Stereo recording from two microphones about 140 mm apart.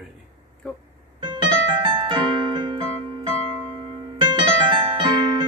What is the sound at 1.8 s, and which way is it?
Keyboard, 40° right (ahead or behind).